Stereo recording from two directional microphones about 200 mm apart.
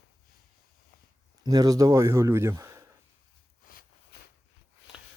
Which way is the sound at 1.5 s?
20° right (ahead or behind).